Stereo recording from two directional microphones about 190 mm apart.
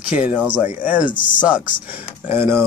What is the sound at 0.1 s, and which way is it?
Speech, 10° right (ahead or behind).